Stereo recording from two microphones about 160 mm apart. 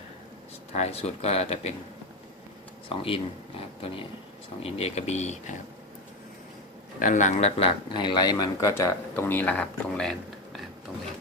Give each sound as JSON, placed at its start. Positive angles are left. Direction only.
{"t": 0.7, "sound": "speech", "side_deg": 40}
{"t": 2.9, "sound": "speech", "side_deg": 35}
{"t": 7.0, "sound": "speech", "side_deg": 50}
{"t": 7.9, "sound": "speech", "side_deg": 30}